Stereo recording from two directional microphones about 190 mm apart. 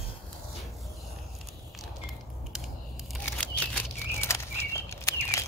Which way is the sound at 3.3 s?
10° left (ahead or behind).